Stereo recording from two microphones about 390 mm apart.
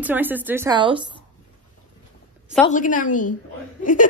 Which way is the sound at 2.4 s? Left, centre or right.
Centre.